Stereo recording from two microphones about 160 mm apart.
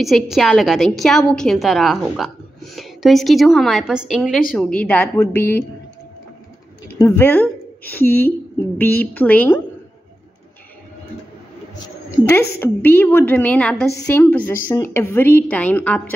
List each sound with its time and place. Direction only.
0.0 s a woman's voice: centre (ahead or behind)
7.0 s a woman's voice: 15° left (ahead or behind)
12.2 s a woman's voice: 30° left (ahead or behind)
12.5 s a woman's voice: 15° left (ahead or behind)